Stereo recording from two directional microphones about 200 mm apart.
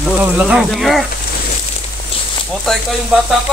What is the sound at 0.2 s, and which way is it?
Sizzle, 5° right (ahead or behind).